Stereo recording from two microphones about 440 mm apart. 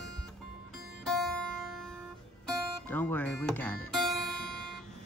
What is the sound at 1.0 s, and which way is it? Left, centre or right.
Music, centre.